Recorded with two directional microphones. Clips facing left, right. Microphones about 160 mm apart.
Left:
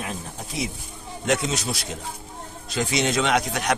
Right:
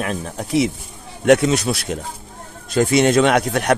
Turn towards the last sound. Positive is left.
turn(degrees=-55)  # may be behind; listen again after turning